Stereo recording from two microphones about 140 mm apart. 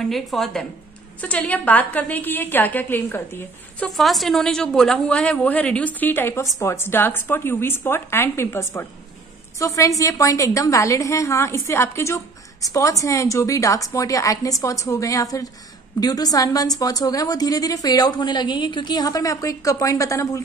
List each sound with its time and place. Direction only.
0.0 s a woman's voice: centre (ahead or behind)
3.8 s a woman's voice: centre (ahead or behind); by 20.4 s 25° left (ahead or behind)